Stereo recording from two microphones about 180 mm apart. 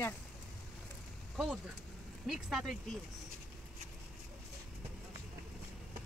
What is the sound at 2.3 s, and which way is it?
Speech, centre (ahead or behind).